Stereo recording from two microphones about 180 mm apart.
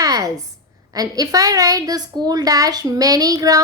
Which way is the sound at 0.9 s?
20° right (ahead or behind).